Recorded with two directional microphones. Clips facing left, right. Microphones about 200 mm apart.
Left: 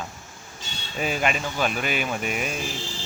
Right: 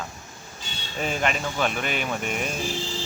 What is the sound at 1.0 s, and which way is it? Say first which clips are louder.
Speech: left 1 dB; 5° left (ahead or behind).